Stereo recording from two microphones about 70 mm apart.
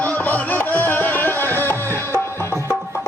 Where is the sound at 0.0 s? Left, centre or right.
Left.